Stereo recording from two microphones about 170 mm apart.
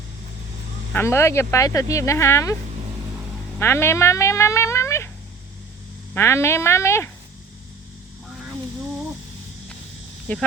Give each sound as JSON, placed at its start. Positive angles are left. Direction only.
{"t": 0.9, "sound": "speech", "side_deg": 15}
{"t": 3.6, "sound": "speech", "side_deg": 15}
{"t": 6.1, "sound": "speech", "side_deg": 15}
{"t": 10.3, "sound": "speech", "side_deg": 10}